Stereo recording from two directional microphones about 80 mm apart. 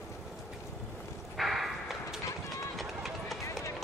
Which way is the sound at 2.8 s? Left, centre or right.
Centre.